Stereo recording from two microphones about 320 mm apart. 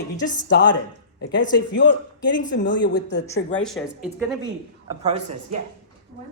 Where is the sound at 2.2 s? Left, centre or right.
Left.